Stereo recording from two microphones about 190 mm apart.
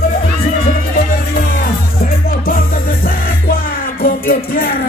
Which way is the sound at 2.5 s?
50° left (ahead or behind).